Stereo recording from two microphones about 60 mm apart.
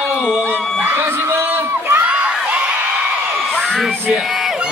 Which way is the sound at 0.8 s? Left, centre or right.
Right.